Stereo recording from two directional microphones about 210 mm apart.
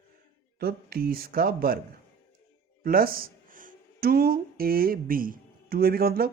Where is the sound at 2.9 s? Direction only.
45° right (ahead or behind).